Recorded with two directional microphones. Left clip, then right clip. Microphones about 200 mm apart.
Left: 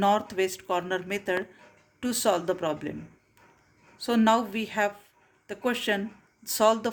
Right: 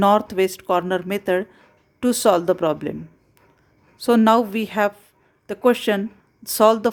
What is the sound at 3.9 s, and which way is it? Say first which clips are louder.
Speech: right 8 dB; 45° right (ahead or behind).